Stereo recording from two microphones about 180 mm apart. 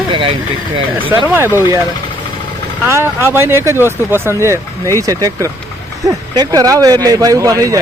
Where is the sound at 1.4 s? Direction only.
15° right (ahead or behind).